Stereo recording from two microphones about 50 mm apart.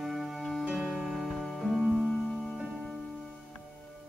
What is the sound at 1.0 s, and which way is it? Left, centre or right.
Music, centre.